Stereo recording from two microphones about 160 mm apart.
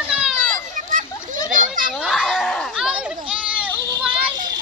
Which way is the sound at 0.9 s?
50° right (ahead or behind).